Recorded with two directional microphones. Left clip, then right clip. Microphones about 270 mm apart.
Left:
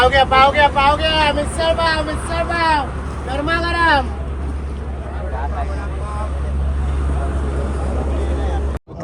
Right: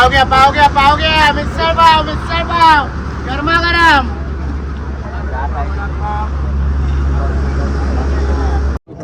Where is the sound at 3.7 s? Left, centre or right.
Right.